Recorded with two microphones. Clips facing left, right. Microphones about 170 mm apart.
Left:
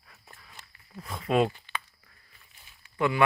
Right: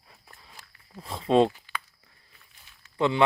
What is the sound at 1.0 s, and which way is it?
Speech, 25° right (ahead or behind).